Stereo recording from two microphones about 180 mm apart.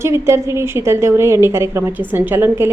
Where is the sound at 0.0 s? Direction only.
15° right (ahead or behind).